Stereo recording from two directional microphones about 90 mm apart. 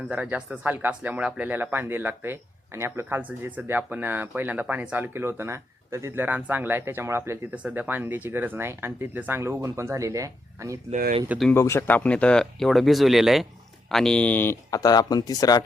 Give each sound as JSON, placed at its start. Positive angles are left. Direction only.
{"t": 0.1, "sound": "speech", "side_deg": -15}
{"t": 6.2, "sound": "speech", "side_deg": -20}
{"t": 7.5, "sound": "speech", "side_deg": -15}
{"t": 11.5, "sound": "speech", "side_deg": 30}
{"t": 11.9, "sound": "speech", "side_deg": 15}
{"t": 13.9, "sound": "speech", "side_deg": 5}
{"t": 14.7, "sound": "speech", "side_deg": 45}